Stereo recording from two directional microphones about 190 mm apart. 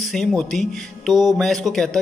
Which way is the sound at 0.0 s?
Centre (ahead or behind).